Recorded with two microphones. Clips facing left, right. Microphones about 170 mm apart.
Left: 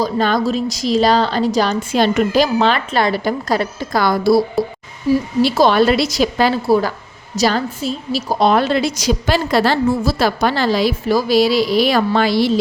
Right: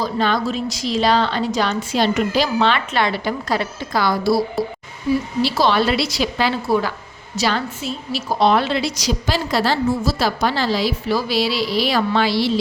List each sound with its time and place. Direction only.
0.0 s a woman's voice: 45° left (ahead or behind)
1.9 s a woman's voice: 50° left (ahead or behind)
4.6 s a woman's voice: centre (ahead or behind)
5.4 s a woman's voice: 50° left (ahead or behind)